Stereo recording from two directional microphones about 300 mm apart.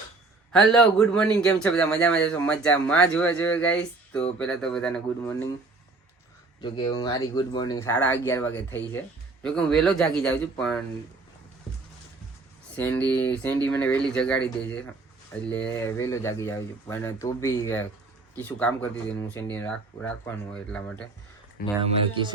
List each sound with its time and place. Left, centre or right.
0.5 s a man's voice: centre
6.6 s a man's voice: centre
12.7 s a man's voice: centre
21.6 s speech: left